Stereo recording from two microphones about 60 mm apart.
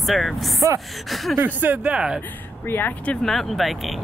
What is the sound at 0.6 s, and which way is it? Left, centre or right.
Speech, right.